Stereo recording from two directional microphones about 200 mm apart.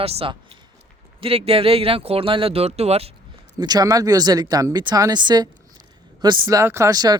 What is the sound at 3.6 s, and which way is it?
Speech, 20° right (ahead or behind).